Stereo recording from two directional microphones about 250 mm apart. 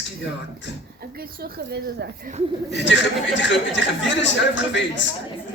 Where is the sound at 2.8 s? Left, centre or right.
Left.